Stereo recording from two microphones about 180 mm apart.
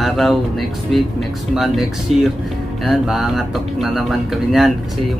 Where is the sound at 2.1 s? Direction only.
35° right (ahead or behind).